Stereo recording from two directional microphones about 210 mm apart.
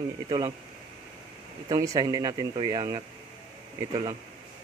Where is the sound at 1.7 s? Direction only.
15° right (ahead or behind).